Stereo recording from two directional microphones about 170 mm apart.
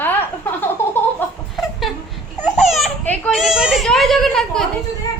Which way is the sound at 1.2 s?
10° left (ahead or behind).